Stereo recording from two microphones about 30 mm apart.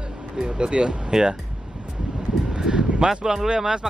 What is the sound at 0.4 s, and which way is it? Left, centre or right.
Speech, right.